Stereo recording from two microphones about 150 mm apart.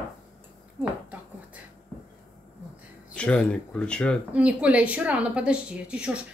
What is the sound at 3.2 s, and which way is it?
Speech, 5° left (ahead or behind).